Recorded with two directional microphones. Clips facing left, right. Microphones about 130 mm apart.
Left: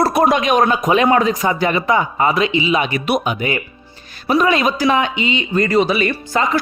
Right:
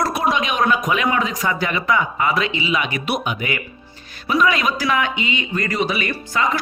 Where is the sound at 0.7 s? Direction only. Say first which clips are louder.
Left 5 dB; 30° left (ahead or behind).